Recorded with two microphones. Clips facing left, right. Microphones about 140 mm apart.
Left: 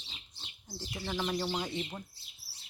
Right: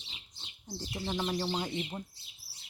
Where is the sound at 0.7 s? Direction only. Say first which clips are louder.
Right 2 dB; 20° right (ahead or behind).